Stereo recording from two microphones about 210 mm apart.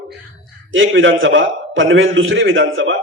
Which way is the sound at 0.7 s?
65° right (ahead or behind).